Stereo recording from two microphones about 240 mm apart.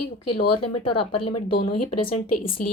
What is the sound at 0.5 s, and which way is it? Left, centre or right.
Speech, left.